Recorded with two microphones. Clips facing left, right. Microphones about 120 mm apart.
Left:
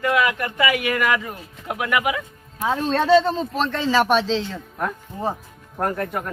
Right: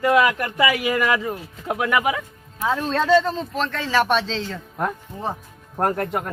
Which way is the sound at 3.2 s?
5° left (ahead or behind).